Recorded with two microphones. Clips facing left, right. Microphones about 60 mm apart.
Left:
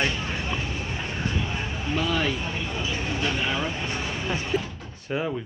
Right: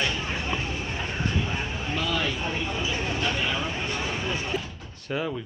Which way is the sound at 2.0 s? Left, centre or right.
Left.